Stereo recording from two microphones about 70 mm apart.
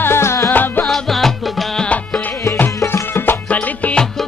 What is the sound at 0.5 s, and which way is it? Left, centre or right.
Music, left.